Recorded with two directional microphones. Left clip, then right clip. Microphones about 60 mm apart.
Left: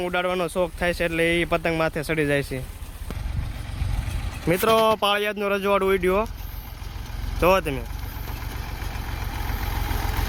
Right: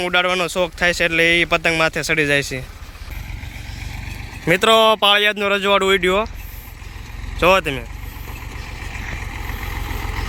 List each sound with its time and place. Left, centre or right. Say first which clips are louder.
0.0 s speech: right 7 dB; centre
0.3 s speech: right 5 dB; left
0.8 s speech: right 9 dB; centre
1.3 s speech: right 7 dB; left
4.4 s speech: right 6 dB; right
4.9 s speech: right 8 dB; centre
7.3 s speech: right 5 dB; centre
8.8 s vehicle: right 8 dB; centre